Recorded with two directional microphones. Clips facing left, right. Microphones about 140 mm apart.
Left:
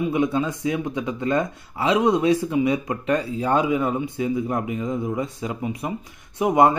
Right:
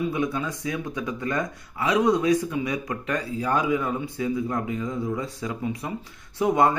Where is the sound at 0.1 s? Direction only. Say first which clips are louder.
Left 5 dB; 25° left (ahead or behind).